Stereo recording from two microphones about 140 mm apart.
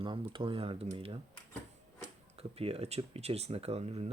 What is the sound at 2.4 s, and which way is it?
Speech, 45° right (ahead or behind).